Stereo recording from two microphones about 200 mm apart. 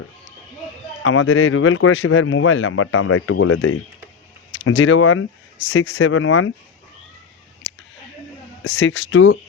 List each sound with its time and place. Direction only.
1.0 s speech: 80° left
4.6 s speech: 75° left (ahead or behind)
5.6 s speech: 65° left (ahead or behind); by 6.5 s 90° left
8.6 s speech: 65° left (ahead or behind)